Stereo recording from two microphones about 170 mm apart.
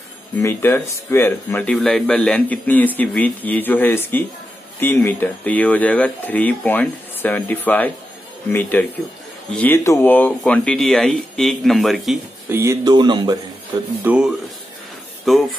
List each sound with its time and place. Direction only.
0.4 s speech: 15° left (ahead or behind)
12.4 s speech: 15° right (ahead or behind)
14.0 s speech: 5° right (ahead or behind)